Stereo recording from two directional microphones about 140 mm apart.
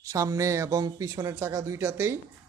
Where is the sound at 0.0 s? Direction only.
25° right (ahead or behind).